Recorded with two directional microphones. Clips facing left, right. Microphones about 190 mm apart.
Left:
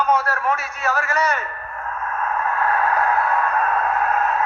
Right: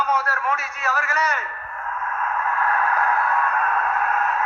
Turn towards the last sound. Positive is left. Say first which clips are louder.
# left 3 dB
turn(degrees=30)  # may be behind; listen again after turning